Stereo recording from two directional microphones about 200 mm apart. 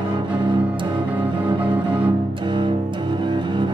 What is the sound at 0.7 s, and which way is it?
Music, 25° right (ahead or behind).